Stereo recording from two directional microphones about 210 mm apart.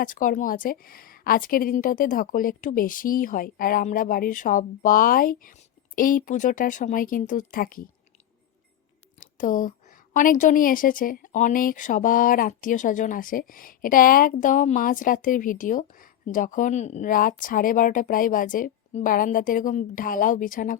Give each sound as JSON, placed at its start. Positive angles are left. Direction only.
{"t": 0.0, "sound": "a woman's voice", "side_deg": 40}
{"t": 9.2, "sound": "a woman's voice", "side_deg": 40}